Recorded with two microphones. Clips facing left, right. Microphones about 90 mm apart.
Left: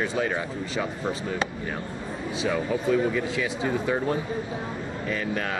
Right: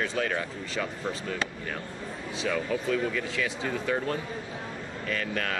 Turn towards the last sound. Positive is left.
turn(degrees=10)  # may be behind; listen again after turning